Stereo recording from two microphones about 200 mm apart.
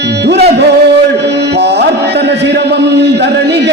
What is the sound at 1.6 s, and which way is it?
Chant, 55° right (ahead or behind).